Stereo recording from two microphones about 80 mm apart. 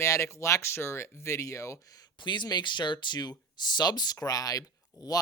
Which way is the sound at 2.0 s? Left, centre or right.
Left.